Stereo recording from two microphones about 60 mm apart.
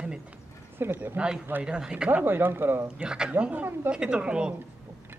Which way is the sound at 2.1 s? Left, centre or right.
Right.